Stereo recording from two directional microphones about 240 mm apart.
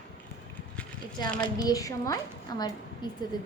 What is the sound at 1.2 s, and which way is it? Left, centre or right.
A woman's voice, centre.